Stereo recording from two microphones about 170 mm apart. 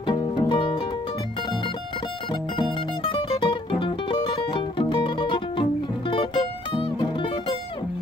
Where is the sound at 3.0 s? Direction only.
25° left (ahead or behind).